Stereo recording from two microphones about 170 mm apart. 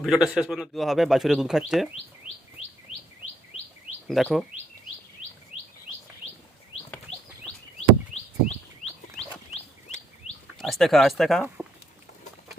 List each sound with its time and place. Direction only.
0.0 s speech: centre (ahead or behind)
4.1 s speech: centre (ahead or behind)
7.8 s bird: 40° left (ahead or behind)
10.6 s speech: centre (ahead or behind)